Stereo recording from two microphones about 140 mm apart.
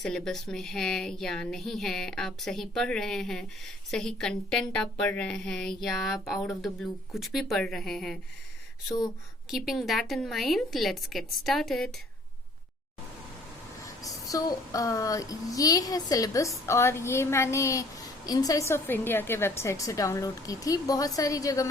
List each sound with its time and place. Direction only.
0.0 s speech: 5° left (ahead or behind)
9.5 s speech: centre (ahead or behind)
13.8 s a woman's voice: 25° left (ahead or behind)